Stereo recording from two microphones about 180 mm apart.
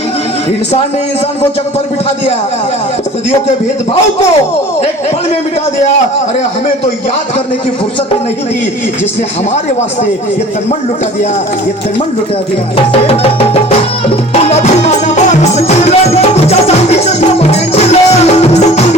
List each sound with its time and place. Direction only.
12.7 s music: 30° left (ahead or behind)